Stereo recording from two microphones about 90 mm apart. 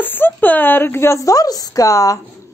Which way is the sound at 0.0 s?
20° left (ahead or behind).